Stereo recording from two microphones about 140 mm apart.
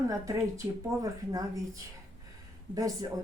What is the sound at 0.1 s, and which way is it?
Speech, 25° right (ahead or behind).